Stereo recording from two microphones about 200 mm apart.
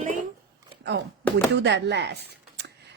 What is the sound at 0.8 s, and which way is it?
A woman's voice, 60° right (ahead or behind).